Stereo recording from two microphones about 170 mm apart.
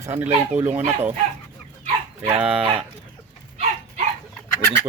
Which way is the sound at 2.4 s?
5° right (ahead or behind).